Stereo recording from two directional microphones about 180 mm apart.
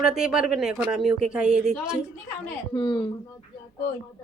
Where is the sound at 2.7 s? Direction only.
25° left (ahead or behind).